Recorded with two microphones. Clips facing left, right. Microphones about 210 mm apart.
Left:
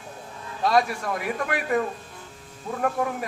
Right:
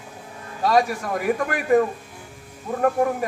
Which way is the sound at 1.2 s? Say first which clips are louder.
Right 7 dB; 45° right (ahead or behind).